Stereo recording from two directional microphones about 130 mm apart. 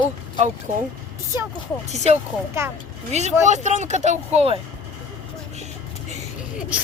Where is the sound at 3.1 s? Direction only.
60° right (ahead or behind).